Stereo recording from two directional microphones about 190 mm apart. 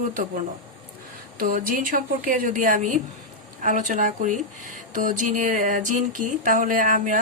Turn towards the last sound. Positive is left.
turn(degrees=-45)  # may be behind; listen again after turning